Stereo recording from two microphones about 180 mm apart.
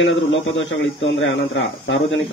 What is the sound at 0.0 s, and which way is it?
Speech, 90° left.